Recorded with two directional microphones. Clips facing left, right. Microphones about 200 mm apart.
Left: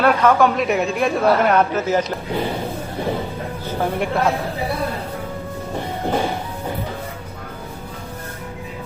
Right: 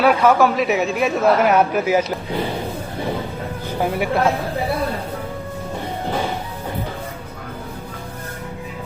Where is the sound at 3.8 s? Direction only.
5° right (ahead or behind).